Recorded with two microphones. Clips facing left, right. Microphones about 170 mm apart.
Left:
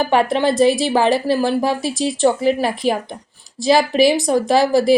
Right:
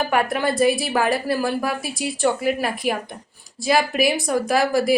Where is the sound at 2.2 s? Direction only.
30° left (ahead or behind).